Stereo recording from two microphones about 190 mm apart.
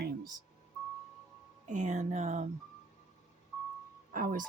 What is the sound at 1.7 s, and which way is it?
Speech, 40° right (ahead or behind).